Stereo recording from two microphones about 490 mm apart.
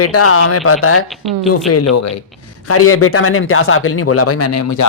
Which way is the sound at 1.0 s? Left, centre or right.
Centre.